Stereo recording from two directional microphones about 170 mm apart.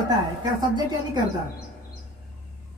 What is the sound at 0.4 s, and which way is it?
Speech, 25° right (ahead or behind).